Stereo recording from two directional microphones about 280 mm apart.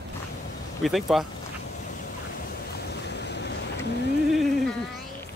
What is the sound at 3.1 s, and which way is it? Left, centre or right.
Boat, left.